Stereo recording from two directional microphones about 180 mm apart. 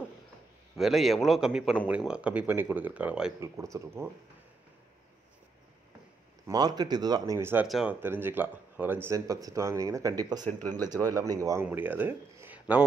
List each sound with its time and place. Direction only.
0.7 s a man's voice: centre (ahead or behind)
3.3 s speech: 15° right (ahead or behind)
6.4 s speech: 20° right (ahead or behind)
7.6 s speech: 5° right (ahead or behind)